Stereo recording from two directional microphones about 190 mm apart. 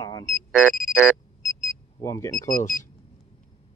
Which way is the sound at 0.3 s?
5° right (ahead or behind).